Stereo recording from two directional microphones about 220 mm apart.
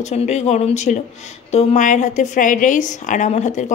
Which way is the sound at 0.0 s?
30° left (ahead or behind).